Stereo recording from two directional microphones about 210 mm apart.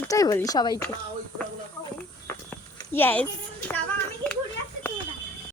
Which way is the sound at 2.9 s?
10° left (ahead or behind).